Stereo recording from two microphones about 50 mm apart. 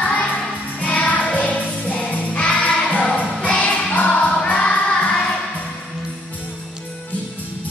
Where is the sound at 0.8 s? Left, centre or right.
Left.